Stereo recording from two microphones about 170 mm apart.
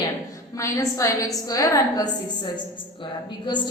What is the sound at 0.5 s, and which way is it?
A woman's voice, 20° left (ahead or behind).